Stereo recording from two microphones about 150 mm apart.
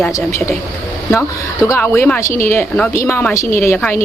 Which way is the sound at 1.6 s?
15° left (ahead or behind).